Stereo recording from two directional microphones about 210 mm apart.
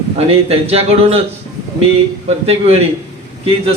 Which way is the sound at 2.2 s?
30° right (ahead or behind).